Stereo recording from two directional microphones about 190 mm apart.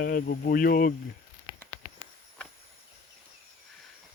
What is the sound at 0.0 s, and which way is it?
Speech, 50° left (ahead or behind).